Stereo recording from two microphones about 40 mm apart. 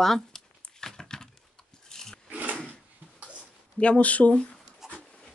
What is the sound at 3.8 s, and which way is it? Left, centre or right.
Speech, left.